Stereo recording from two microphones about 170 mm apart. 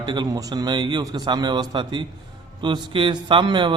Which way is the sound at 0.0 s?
25° right (ahead or behind).